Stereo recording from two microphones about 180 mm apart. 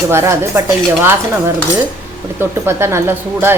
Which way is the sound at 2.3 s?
15° right (ahead or behind).